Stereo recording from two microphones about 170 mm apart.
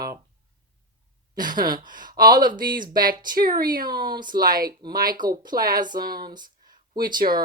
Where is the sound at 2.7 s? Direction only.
25° right (ahead or behind).